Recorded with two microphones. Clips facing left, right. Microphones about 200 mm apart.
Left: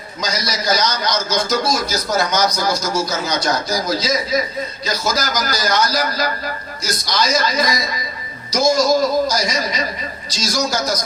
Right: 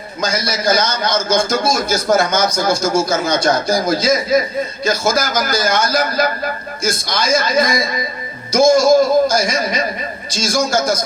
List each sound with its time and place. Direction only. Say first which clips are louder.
0.2 s a man's voice: right 4 dB; 50° right (ahead or behind)